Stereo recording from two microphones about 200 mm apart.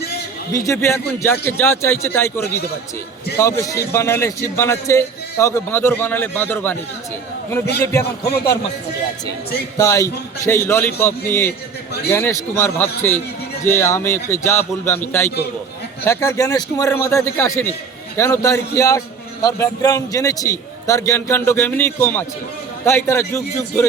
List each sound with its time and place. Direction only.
0.5 s a man's voice: 15° left (ahead or behind)
9.7 s a man's voice: 15° left (ahead or behind)
16.0 s a man's voice: 15° left (ahead or behind)